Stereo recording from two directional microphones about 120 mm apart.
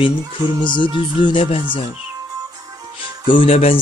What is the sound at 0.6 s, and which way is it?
Music, 40° left (ahead or behind).